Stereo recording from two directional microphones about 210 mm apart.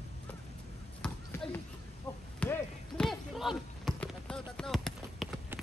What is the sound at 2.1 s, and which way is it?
Chop, 10° left (ahead or behind).